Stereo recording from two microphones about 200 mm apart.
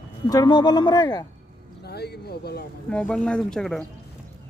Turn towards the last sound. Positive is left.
turn(degrees=5)  # may be behind; listen again after turning